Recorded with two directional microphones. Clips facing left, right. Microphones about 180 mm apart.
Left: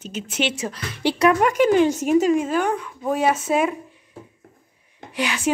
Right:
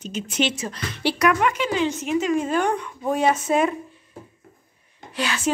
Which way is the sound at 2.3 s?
5° left (ahead or behind).